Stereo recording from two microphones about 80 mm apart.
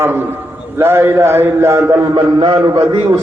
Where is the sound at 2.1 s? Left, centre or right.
Right.